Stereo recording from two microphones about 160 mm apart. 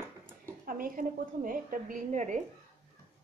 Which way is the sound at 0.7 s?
60° right (ahead or behind).